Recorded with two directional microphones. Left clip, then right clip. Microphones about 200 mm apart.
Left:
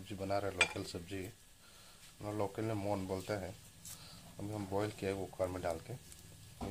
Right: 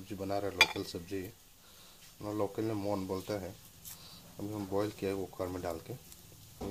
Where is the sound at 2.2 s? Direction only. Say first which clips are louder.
Right 4 dB; 15° left (ahead or behind).